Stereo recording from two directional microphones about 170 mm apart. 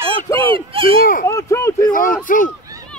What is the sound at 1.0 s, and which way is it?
Speech, 55° left (ahead or behind).